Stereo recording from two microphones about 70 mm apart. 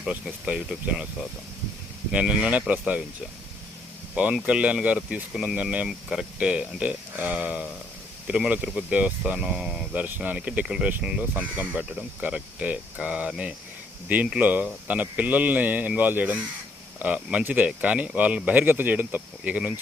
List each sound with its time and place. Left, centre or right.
0.4 s speech: centre
2.1 s speech: centre
4.1 s speech: centre
9.9 s speech: right
14.4 s speech: right